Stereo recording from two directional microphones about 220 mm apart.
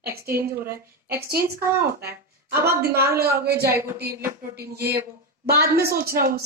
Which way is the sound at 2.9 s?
45° right (ahead or behind).